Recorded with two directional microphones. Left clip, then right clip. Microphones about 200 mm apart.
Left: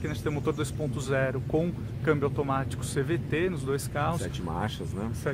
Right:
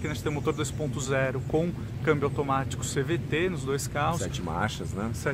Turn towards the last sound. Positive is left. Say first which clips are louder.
# right 3 dB
turn(degrees=-20)  # may be behind; listen again after turning